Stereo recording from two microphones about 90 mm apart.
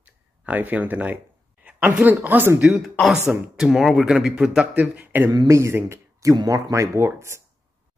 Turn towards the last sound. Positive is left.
turn(degrees=-30)  # may be behind; listen again after turning